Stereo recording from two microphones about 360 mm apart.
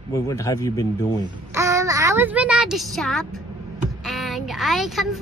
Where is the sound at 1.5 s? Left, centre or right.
Centre.